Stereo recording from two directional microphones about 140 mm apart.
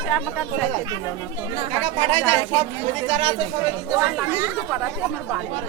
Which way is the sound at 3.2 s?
40° right (ahead or behind).